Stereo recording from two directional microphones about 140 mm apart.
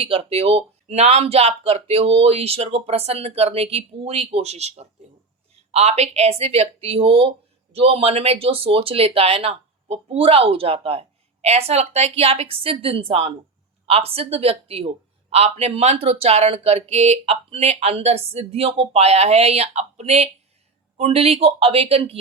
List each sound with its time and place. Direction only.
0.0 s speech: 40° right (ahead or behind)